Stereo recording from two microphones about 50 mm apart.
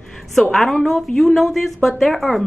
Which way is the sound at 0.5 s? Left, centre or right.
Centre.